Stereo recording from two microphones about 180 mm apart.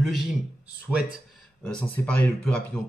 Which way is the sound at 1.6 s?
5° left (ahead or behind).